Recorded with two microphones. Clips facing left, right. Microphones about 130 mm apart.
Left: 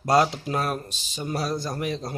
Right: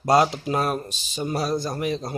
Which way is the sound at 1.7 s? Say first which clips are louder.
Right 3 dB; 5° right (ahead or behind).